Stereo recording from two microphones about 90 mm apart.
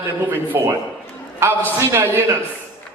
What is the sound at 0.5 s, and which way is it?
A man's voice, 30° right (ahead or behind).